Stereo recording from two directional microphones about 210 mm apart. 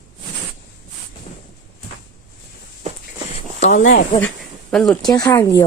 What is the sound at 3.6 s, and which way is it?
Speech, 35° left (ahead or behind).